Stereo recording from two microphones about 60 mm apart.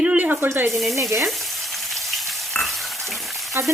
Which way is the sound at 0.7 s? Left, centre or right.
Centre.